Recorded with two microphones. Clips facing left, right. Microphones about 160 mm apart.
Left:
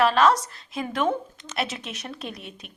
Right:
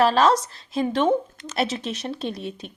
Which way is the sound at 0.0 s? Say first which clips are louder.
Right 1 dB; 35° right (ahead or behind).